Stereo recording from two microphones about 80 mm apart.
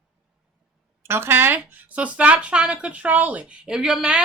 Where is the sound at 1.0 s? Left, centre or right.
Right.